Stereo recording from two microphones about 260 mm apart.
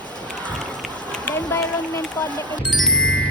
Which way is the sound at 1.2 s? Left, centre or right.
Centre.